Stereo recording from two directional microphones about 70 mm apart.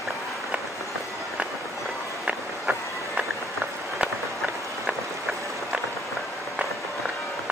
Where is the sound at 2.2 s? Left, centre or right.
Centre.